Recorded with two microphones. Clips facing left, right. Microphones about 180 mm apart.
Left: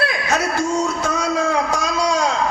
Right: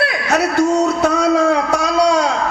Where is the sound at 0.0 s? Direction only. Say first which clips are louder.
Right 4 dB; 65° right (ahead or behind).